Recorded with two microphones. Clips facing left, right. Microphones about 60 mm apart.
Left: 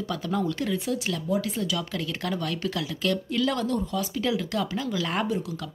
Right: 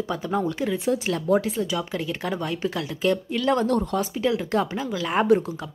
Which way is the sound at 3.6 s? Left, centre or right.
Right.